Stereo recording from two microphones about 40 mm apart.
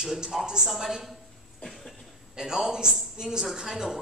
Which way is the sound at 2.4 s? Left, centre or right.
Centre.